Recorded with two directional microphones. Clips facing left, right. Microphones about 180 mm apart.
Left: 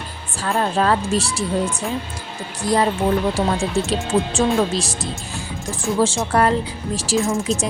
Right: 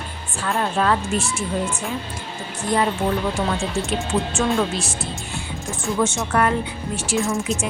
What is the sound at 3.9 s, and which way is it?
Speech, 35° left (ahead or behind).